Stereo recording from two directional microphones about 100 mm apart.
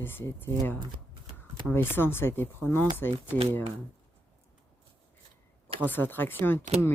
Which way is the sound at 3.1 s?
65° right (ahead or behind).